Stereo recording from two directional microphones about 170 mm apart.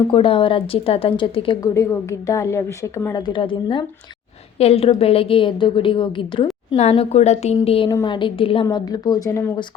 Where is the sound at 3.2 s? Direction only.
30° left (ahead or behind).